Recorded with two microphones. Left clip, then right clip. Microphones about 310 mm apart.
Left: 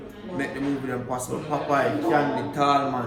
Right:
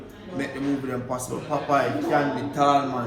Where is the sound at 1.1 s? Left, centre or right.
Centre.